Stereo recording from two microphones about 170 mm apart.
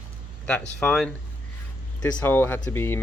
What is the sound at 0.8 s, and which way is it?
Speech, 5° left (ahead or behind).